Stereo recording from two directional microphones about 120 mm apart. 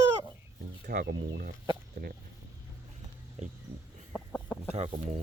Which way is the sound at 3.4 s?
80° right.